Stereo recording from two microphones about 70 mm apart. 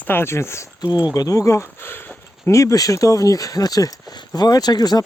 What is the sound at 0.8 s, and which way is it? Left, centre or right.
Speech, left.